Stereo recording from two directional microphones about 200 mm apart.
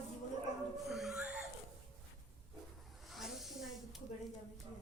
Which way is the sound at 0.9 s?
Centre (ahead or behind).